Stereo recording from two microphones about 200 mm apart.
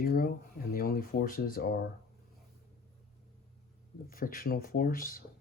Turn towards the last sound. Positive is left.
turn(degrees=45)  # may be behind; listen again after turning